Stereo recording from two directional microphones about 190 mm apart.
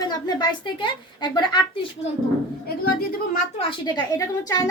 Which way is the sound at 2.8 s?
55° left (ahead or behind).